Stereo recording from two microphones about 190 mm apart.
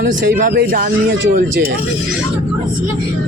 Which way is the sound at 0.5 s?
50° right (ahead or behind).